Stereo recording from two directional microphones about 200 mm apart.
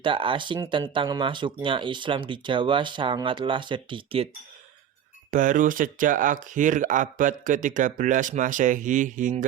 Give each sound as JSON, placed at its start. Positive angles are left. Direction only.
{"t": 0.0, "sound": "speech", "side_deg": -25}
{"t": 5.3, "sound": "speech", "side_deg": -40}